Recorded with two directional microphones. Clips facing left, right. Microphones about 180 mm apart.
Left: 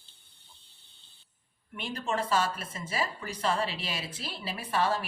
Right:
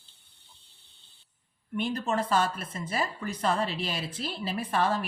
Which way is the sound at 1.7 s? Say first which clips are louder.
Right 4 dB; 45° right (ahead or behind).